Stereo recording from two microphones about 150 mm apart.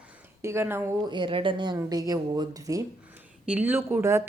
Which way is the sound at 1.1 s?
30° right (ahead or behind).